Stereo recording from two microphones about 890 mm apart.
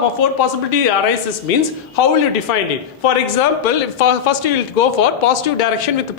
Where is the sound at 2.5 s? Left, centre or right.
Left.